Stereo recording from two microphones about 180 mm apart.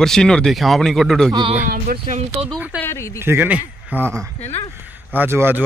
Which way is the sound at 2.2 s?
35° right (ahead or behind).